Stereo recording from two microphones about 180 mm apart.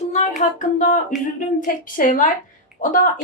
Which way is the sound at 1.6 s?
45° left (ahead or behind).